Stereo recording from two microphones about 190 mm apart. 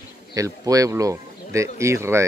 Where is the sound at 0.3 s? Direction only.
20° right (ahead or behind).